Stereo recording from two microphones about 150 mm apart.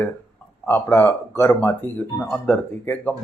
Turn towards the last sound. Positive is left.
turn(degrees=10)  # may be behind; listen again after turning